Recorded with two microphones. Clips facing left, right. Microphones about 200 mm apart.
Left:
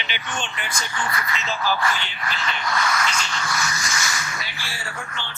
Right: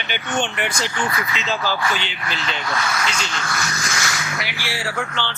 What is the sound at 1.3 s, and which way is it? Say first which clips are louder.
Speech: left 1 dB; 90° right.